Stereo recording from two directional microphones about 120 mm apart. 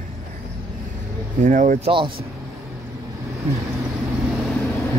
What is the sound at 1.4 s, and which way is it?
Speech, 90° right.